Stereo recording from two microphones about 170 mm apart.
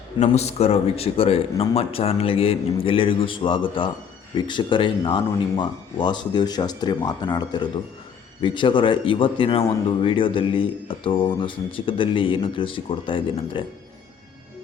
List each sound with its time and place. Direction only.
0.2 s speech: 40° left (ahead or behind)